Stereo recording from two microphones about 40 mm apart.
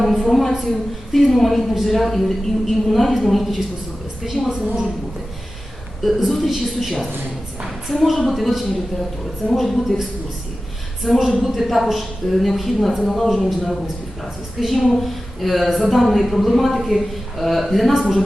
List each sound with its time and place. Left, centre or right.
0.0 s a sound: centre
1.1 s a woman's voice: centre
4.6 s a woman's voice: right
6.0 s a woman's voice: centre
7.9 s a woman's voice: centre
11.0 s a woman's voice: centre
11.3 s a woman's voice: centre